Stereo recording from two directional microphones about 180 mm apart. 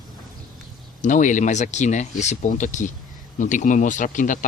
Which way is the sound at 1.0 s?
45° left (ahead or behind).